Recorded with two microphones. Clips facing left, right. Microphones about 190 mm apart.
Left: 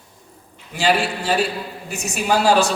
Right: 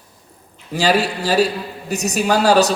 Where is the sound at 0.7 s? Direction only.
40° right (ahead or behind).